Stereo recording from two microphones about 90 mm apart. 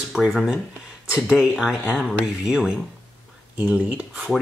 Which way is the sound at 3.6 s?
20° right (ahead or behind).